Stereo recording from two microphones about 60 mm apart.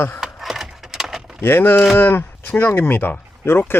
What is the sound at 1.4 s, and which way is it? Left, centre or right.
Speech, left.